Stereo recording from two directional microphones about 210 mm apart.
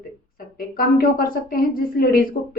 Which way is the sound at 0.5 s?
45° left (ahead or behind).